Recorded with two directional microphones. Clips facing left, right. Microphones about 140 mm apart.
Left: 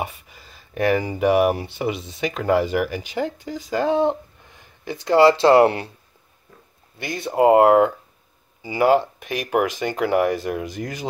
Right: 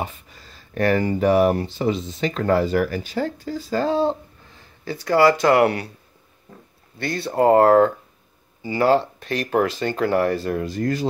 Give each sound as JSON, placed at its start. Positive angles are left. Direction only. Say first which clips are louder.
{"t": 0.0, "sound": "speech", "louder": "even", "side_deg": 10}
{"t": 7.0, "sound": "speech", "louder": "left 1 dB", "side_deg": 15}